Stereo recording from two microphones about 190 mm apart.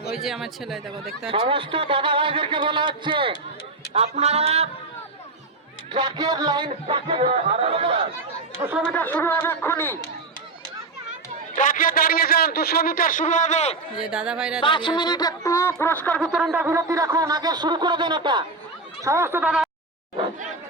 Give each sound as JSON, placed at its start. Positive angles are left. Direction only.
{"t": 0.1, "sound": "speech", "side_deg": 0}
{"t": 1.3, "sound": "speech", "side_deg": -30}
{"t": 3.9, "sound": "a sound", "side_deg": -35}
{"t": 5.9, "sound": "speech", "side_deg": -20}
{"t": 8.9, "sound": "speech", "side_deg": 10}
{"t": 11.5, "sound": "a man's voice", "side_deg": 45}
{"t": 14.0, "sound": "speech", "side_deg": -5}
{"t": 14.6, "sound": "speech", "side_deg": 25}
{"t": 16.3, "sound": "speech", "side_deg": -5}